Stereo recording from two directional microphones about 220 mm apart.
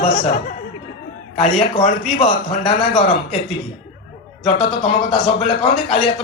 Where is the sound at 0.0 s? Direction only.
35° left (ahead or behind).